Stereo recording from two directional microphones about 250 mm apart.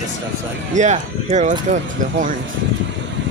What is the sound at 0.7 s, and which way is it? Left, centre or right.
Speech, right.